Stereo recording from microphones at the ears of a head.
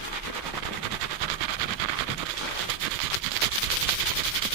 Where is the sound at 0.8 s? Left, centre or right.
Right.